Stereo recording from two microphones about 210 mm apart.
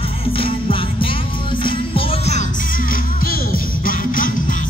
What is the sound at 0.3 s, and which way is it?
Music, 25° left (ahead or behind).